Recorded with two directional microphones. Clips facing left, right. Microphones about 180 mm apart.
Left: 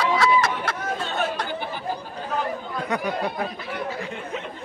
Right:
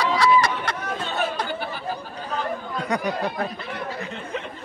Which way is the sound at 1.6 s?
15° left (ahead or behind).